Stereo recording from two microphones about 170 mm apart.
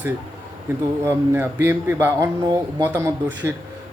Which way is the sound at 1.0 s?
15° right (ahead or behind).